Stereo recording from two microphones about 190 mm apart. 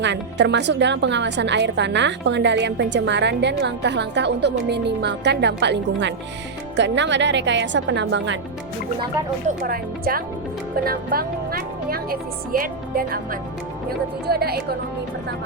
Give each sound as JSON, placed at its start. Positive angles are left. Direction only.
{"t": 0.0, "sound": "a woman's voice", "side_deg": -70}
{"t": 9.5, "sound": "speech", "side_deg": -50}
{"t": 14.3, "sound": "a woman's voice", "side_deg": -55}